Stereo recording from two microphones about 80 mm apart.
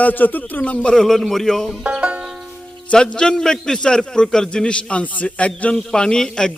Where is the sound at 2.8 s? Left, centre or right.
Centre.